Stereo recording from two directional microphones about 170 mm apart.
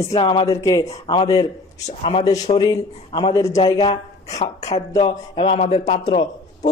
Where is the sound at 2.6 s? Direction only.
25° left (ahead or behind).